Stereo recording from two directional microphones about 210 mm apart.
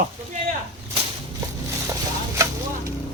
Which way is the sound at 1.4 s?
15° right (ahead or behind).